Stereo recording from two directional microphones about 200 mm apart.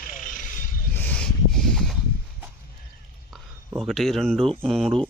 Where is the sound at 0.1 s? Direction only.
40° left (ahead or behind).